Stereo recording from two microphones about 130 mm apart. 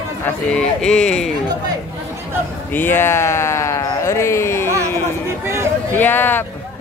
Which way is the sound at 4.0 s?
20° left (ahead or behind).